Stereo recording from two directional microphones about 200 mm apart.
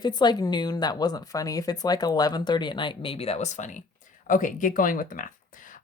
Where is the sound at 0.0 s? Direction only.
20° left (ahead or behind).